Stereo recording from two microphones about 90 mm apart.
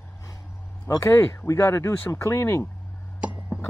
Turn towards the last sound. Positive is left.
turn(degrees=-10)  # may be behind; listen again after turning